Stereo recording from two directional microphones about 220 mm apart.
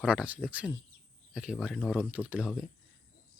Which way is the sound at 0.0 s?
5° right (ahead or behind).